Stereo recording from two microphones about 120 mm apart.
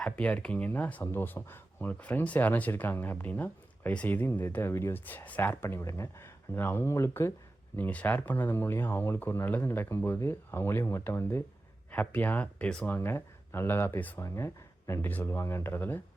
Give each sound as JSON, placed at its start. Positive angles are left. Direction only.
{"t": 0.0, "sound": "speech", "side_deg": 10}